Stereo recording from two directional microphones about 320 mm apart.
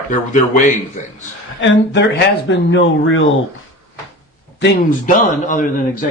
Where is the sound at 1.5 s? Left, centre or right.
Left.